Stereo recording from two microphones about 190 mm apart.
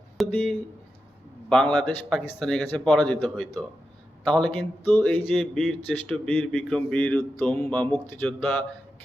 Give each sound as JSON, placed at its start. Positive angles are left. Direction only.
{"t": 0.2, "sound": "a man's voice", "side_deg": 5}
{"t": 4.9, "sound": "a sound", "side_deg": 10}
{"t": 5.3, "sound": "speech", "side_deg": 0}